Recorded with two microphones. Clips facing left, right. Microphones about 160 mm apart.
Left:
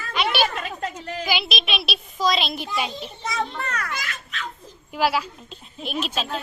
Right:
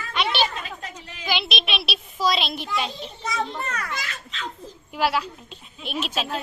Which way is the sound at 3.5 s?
20° right (ahead or behind).